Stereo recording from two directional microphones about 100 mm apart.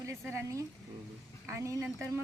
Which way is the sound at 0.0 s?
30° right (ahead or behind).